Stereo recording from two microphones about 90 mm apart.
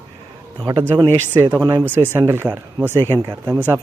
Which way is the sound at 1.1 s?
25° left (ahead or behind).